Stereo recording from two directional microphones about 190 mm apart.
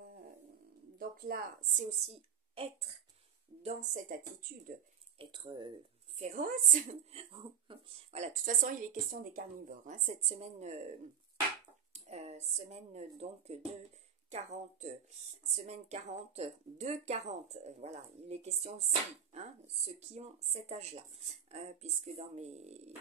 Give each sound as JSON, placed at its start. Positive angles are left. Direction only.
{"t": 0.9, "sound": "a woman's voice", "side_deg": -50}
{"t": 3.6, "sound": "speech", "side_deg": -45}
{"t": 5.2, "sound": "speech", "side_deg": -25}
{"t": 6.1, "sound": "speech", "side_deg": -45}
{"t": 11.9, "sound": "speech", "side_deg": -35}